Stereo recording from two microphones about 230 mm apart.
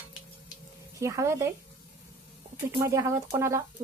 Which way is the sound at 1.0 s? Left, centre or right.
Centre.